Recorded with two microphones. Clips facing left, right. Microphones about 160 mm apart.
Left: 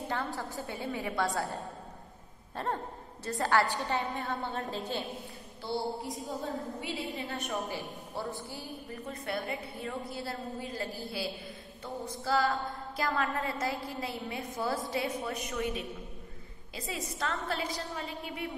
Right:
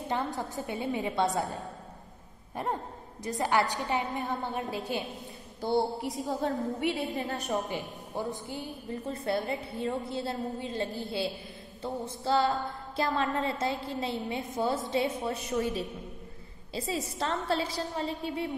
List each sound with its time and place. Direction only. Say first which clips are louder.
0.1 s a sound: right 5 dB; 20° right (ahead or behind)
3.3 s a woman's voice: right 1 dB; 15° right (ahead or behind)
6.2 s a woman's voice: right 7 dB; 70° right (ahead or behind)
7.2 s a woman's voice: right 4 dB; 40° right (ahead or behind)
8.1 s a sound: right 5 dB; 15° right (ahead or behind); by 15.8 s 35° right (ahead or behind)
16.7 s a woman's voice: right 5 dB; 30° right (ahead or behind)